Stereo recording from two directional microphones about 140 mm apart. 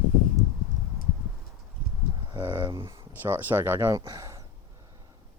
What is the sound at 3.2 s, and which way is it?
Speech, 15° right (ahead or behind).